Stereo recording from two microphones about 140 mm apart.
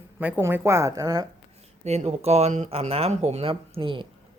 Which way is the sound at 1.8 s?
50° right (ahead or behind).